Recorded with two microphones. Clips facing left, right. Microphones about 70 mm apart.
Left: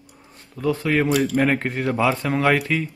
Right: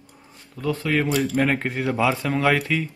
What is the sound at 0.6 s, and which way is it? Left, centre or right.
Speech, centre.